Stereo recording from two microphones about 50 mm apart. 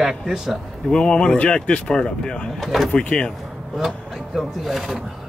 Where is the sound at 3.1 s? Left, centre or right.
Centre.